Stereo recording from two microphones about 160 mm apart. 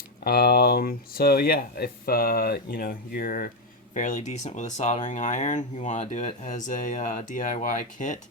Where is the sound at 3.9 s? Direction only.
50° left (ahead or behind).